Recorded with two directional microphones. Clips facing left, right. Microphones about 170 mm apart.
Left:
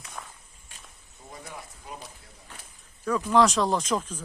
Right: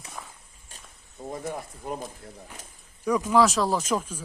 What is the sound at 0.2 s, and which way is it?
Walk, 5° right (ahead or behind).